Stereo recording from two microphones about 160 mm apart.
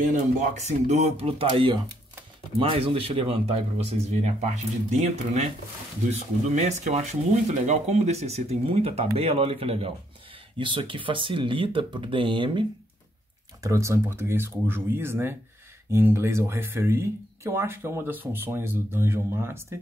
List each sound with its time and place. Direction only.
0.0 s speech: 50° right (ahead or behind); by 12.6 s 30° right (ahead or behind)
13.6 s speech: 20° right (ahead or behind)